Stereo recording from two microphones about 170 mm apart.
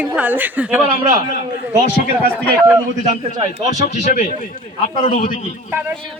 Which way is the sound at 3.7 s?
45° left (ahead or behind).